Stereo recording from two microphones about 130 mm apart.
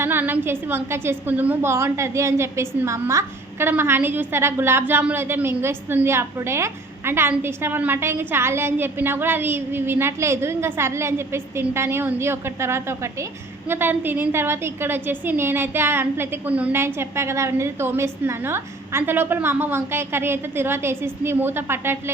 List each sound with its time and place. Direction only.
0.0 s a woman's voice: 15° right (ahead or behind)